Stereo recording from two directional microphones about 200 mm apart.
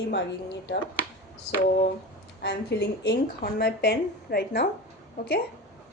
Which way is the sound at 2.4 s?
55° left (ahead or behind).